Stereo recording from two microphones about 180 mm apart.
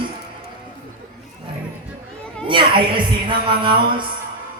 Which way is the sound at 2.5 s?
25° right (ahead or behind).